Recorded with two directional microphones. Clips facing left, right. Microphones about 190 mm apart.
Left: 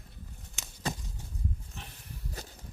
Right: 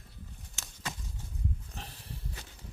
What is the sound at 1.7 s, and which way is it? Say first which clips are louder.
Pig: right 1 dB; 35° right (ahead or behind).